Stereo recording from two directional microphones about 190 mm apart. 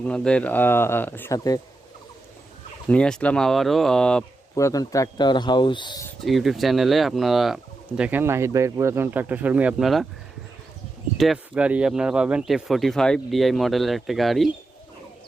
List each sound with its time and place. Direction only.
0.0 s speech: 5° left (ahead or behind)
2.9 s speech: 5° left (ahead or behind)
4.5 s speech: 15° left (ahead or behind)
6.1 s speech: centre (ahead or behind)
11.2 s speech: 5° right (ahead or behind)